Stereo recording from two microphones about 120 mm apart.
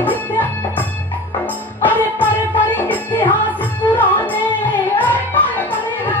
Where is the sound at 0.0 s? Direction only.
15° left (ahead or behind).